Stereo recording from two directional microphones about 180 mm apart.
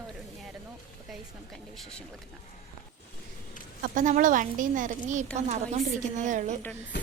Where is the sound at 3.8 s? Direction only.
45° right (ahead or behind).